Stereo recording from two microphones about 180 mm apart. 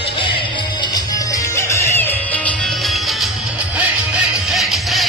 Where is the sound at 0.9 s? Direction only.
15° left (ahead or behind).